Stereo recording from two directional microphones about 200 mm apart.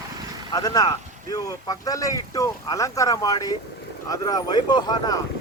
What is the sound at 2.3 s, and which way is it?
Speech, 15° left (ahead or behind).